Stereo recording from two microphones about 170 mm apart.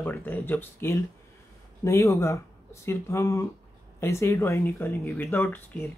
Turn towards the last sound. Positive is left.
turn(degrees=10)  # may be behind; listen again after turning